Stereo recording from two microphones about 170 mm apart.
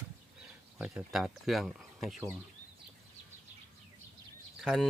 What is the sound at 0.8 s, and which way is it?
Speech, 5° right (ahead or behind).